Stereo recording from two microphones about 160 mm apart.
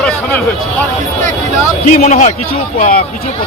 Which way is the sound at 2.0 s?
45° left (ahead or behind).